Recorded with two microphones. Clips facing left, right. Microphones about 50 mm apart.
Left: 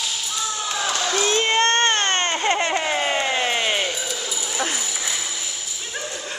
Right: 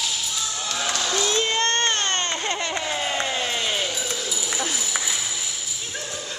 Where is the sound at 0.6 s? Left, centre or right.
Centre; by 1.7 s left.